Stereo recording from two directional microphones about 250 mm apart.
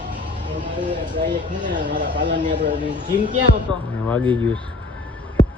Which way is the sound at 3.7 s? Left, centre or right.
Centre.